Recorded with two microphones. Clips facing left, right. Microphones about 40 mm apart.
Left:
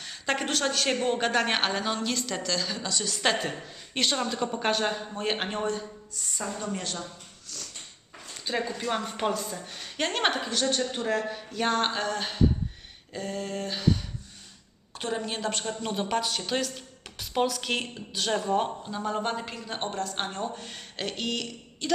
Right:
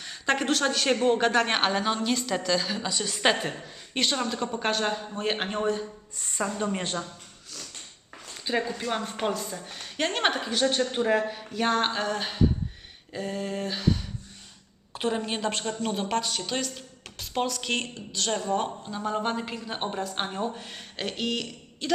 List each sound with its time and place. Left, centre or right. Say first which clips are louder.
0.0 s a woman's voice: right 3 dB; centre
3.5 s a woman's voice: right 1 dB; centre
6.1 s a woman's voice: right 5 dB; right
8.4 s a woman's voice: right 1 dB; centre
10.6 s a woman's voice: right 5 dB; centre
14.9 s a woman's voice: right 3 dB; centre